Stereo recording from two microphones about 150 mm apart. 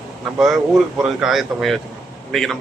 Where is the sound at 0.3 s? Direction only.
Centre (ahead or behind).